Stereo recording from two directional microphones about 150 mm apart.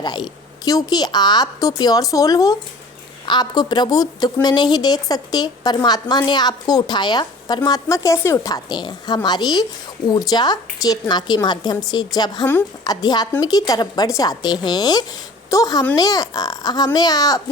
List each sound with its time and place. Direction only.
0.0 s a woman's voice: 25° left (ahead or behind)